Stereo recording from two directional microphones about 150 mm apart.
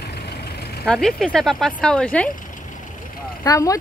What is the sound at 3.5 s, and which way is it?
Speech, 20° left (ahead or behind).